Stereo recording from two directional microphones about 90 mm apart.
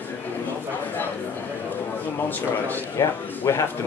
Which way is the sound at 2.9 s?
30° left (ahead or behind).